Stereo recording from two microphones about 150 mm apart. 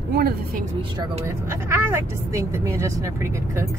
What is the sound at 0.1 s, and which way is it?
Speech, 90° right.